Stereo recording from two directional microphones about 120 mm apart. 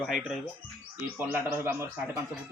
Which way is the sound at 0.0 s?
5° right (ahead or behind).